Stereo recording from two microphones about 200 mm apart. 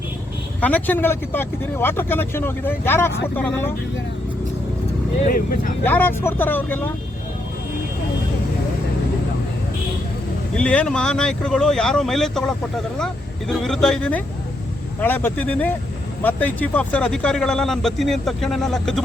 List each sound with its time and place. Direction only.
0.6 s speech: 10° left (ahead or behind)
5.2 s speech: 45° left (ahead or behind)
5.8 s speech: 10° left (ahead or behind)
10.5 s speech: 5° left (ahead or behind)